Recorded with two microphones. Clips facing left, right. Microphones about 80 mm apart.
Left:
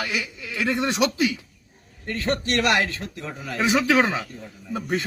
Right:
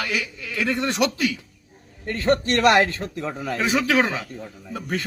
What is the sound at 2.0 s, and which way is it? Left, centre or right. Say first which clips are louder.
A man's voice: right 4 dB; right.